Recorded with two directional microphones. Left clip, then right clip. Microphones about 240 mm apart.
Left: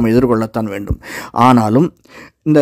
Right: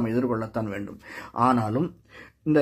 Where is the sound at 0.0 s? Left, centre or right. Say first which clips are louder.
Left 13 dB; left.